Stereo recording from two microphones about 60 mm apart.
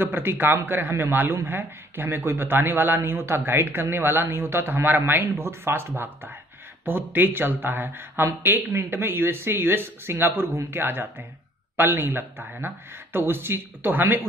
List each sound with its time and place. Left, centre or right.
0.0 s a man's voice: right